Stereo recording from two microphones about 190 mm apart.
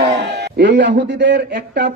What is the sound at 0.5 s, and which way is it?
Speech, 65° right (ahead or behind).